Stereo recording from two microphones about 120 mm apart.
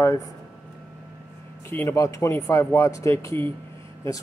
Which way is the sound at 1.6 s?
20° left (ahead or behind).